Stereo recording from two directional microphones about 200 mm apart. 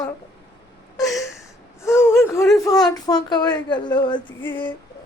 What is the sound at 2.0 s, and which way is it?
A woman's voice, 15° left (ahead or behind).